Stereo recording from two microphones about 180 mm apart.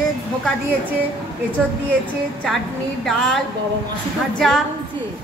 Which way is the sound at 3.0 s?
Centre (ahead or behind).